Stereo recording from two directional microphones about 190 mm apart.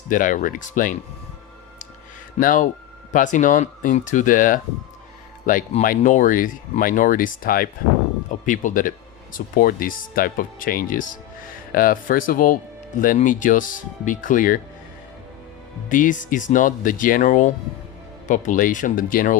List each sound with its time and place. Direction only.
0.1 s speech: 45° left (ahead or behind)
2.4 s speech: 45° left (ahead or behind)
15.9 s speech: 45° left (ahead or behind)